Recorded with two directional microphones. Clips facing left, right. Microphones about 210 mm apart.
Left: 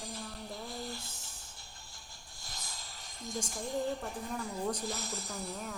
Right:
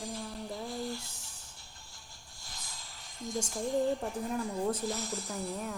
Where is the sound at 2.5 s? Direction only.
40° left (ahead or behind).